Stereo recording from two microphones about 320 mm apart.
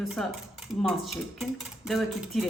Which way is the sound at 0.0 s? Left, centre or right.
Centre.